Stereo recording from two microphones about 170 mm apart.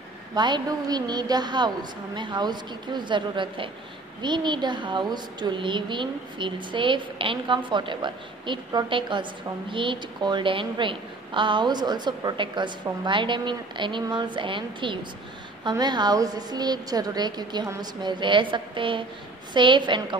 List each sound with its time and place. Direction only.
0.3 s a woman's voice: 25° right (ahead or behind)